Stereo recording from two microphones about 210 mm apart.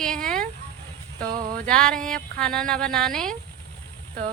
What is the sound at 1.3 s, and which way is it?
Music, 40° right (ahead or behind).